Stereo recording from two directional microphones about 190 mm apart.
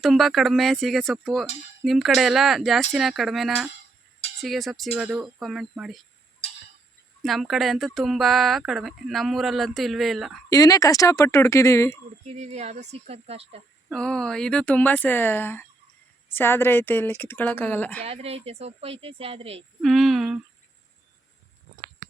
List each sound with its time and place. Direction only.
0.0 s speech: centre (ahead or behind)
7.2 s speech: centre (ahead or behind)
10.5 s speech: 20° left (ahead or behind)
12.3 s speech: 35° right (ahead or behind)
13.9 s speech: 5° left (ahead or behind)
18.0 s speech: 30° right (ahead or behind)
19.8 s a sound: centre (ahead or behind)